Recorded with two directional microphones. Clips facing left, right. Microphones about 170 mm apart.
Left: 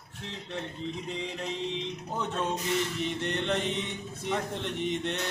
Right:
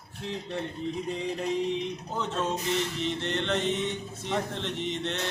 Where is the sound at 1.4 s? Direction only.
15° right (ahead or behind).